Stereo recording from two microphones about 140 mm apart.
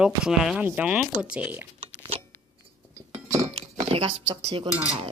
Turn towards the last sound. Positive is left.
turn(degrees=-30)  # may be behind; listen again after turning